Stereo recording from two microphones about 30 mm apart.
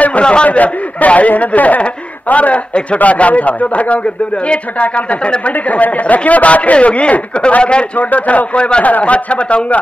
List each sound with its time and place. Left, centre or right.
0.2 s a sound: left
0.5 s a man's voice: left
4.8 s speech: left
8.0 s speech: left
8.5 s a man's voice: left
8.8 s speech: left